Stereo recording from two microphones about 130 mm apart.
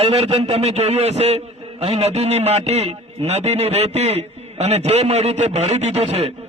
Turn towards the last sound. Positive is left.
turn(degrees=-55)  # may be behind; listen again after turning